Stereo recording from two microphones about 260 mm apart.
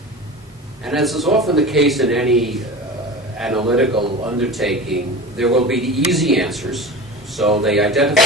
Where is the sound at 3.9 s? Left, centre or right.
Centre.